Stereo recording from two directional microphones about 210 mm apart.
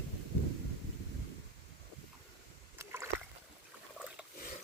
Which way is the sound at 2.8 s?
10° right (ahead or behind).